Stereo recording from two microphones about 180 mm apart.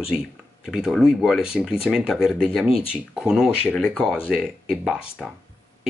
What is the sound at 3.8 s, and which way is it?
Speech, 10° left (ahead or behind).